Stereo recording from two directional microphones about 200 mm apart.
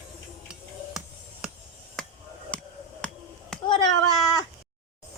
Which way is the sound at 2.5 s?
5° left (ahead or behind).